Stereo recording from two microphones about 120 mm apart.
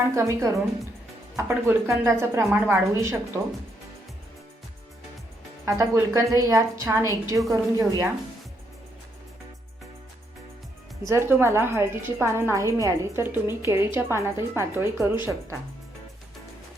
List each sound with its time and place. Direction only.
0.1 s a woman's voice: 25° right (ahead or behind)
5.6 s a woman's voice: 25° right (ahead or behind)
11.1 s a woman's voice: 20° right (ahead or behind)